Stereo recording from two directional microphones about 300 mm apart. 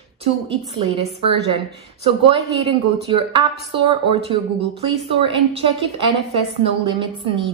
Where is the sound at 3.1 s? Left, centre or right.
Centre.